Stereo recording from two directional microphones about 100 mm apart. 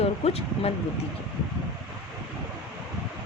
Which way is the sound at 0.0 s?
90° left.